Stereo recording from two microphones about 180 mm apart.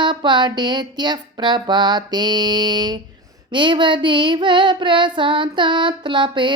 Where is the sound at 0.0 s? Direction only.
25° right (ahead or behind).